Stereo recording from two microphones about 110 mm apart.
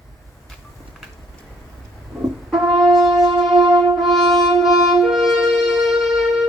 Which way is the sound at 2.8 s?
5° right (ahead or behind).